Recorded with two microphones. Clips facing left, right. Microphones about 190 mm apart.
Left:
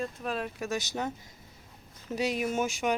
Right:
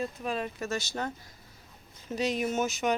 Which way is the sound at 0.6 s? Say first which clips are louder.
Left 1 dB; 15° left (ahead or behind).